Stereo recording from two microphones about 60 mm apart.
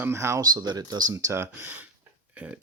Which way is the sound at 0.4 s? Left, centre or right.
Right.